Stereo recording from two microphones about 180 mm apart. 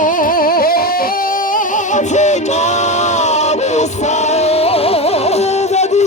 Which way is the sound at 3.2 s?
40° left (ahead or behind).